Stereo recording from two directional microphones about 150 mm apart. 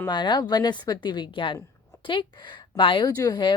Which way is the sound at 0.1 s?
30° left (ahead or behind).